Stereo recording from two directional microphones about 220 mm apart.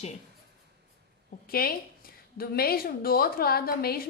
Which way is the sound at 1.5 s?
45° left (ahead or behind).